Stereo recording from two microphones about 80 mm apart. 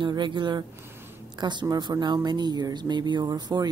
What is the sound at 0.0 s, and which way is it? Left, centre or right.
Speech, right.